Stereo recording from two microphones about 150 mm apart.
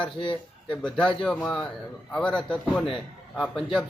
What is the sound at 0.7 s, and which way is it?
A man's voice, 5° left (ahead or behind).